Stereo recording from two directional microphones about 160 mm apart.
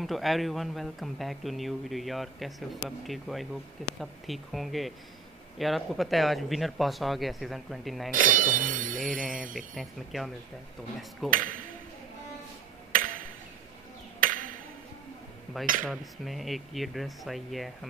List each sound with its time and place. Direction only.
0.0 s speech: centre (ahead or behind)
8.1 s speech: 60° right (ahead or behind)
9.8 s speech: centre (ahead or behind)
11.2 s speech: 55° right (ahead or behind)
12.9 s a sound: 60° right (ahead or behind)
14.2 s ping: 55° right (ahead or behind)
15.6 s speech: 60° right (ahead or behind)
15.9 s speech: centre (ahead or behind)